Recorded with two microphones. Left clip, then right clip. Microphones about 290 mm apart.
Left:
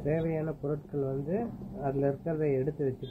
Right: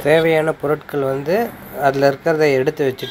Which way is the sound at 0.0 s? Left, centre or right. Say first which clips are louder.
Right 18 dB; right.